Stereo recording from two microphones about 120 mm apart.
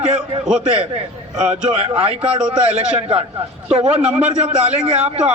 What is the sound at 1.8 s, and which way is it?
Speech, 55° right (ahead or behind).